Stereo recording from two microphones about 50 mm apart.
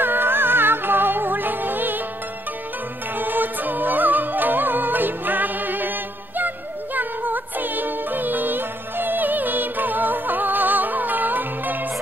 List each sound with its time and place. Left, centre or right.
0.0 s music: right
3.2 s music: right